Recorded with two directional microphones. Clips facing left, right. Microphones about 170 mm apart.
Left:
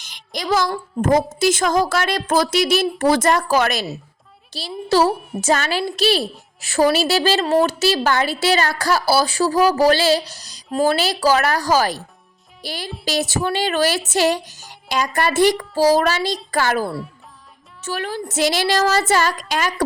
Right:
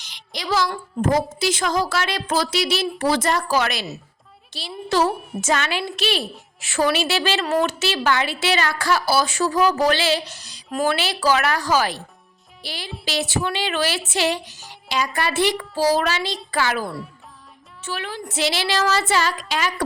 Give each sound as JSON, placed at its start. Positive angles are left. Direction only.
{"t": 0.0, "sound": "a woman's voice", "side_deg": 45}